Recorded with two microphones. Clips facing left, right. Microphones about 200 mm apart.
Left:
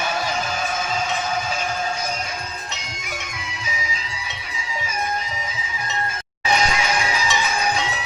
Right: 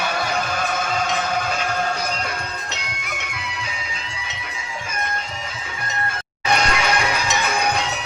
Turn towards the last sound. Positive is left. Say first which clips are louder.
# right 1 dB
turn(degrees=-65)  # may be behind; listen again after turning